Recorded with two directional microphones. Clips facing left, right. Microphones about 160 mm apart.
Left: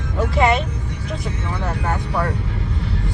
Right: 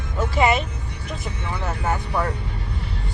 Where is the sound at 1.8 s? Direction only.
Centre (ahead or behind).